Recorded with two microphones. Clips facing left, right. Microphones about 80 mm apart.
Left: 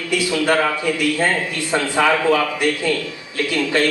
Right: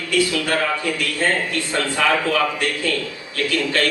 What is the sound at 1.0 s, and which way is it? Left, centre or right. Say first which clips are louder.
A man's voice: left 3 dB; centre.